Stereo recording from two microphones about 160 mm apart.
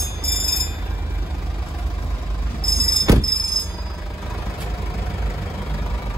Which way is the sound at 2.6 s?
70° left (ahead or behind).